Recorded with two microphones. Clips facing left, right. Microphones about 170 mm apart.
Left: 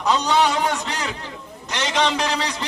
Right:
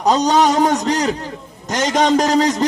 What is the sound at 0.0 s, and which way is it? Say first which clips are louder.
A man's voice: right 5 dB; 40° right (ahead or behind).